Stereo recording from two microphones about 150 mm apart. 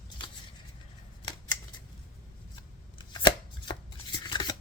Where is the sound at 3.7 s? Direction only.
30° left (ahead or behind).